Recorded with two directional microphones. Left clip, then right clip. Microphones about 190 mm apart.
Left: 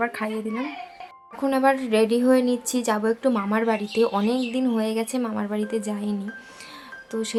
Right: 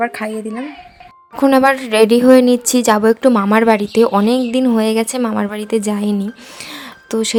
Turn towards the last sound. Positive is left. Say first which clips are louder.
# right 10 dB
turn(degrees=-45)  # may be behind; listen again after turning